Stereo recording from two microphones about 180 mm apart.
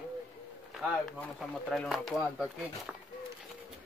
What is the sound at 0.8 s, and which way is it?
Speech, centre (ahead or behind).